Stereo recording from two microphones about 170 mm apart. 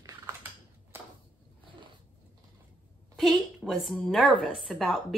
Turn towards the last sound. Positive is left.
turn(degrees=0)  # may be behind; listen again after turning